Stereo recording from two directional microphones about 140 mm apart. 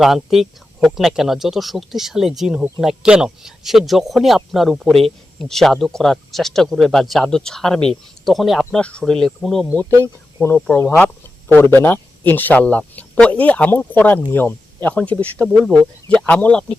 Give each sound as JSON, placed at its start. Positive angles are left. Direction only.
{"t": 0.0, "sound": "speech", "side_deg": 0}
{"t": 9.9, "sound": "speech", "side_deg": -20}
{"t": 10.4, "sound": "speech", "side_deg": 15}